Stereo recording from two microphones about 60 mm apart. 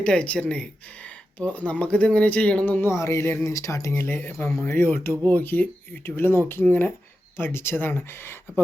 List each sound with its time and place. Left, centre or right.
0.0 s speech: centre
2.8 s a sound: left
3.4 s speech: left
3.9 s speech: left